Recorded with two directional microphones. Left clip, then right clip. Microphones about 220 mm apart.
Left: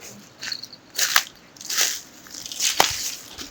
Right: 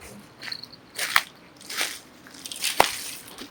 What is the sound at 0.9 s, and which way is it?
Biting, 50° left (ahead or behind).